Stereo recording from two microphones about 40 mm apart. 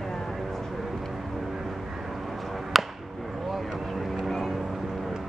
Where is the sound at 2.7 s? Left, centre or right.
Centre.